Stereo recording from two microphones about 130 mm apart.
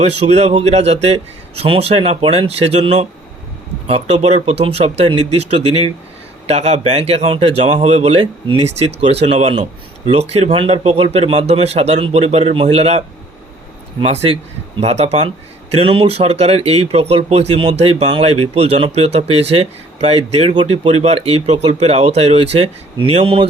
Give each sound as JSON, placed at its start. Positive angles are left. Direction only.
{"t": 0.0, "sound": "speech", "side_deg": -55}
{"t": 15.7, "sound": "speech", "side_deg": -45}